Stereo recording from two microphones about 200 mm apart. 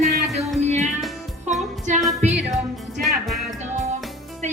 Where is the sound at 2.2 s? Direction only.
35° right (ahead or behind).